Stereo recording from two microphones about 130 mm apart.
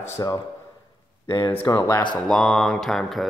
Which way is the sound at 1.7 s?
30° left (ahead or behind).